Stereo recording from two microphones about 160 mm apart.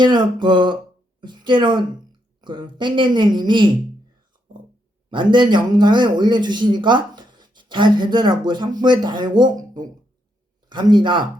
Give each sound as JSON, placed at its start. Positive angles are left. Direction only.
{"t": 0.0, "sound": "a woman's voice", "side_deg": -30}
{"t": 5.1, "sound": "speech", "side_deg": -30}